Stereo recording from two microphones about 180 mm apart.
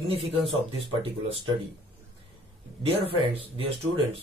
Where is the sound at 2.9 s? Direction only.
30° right (ahead or behind).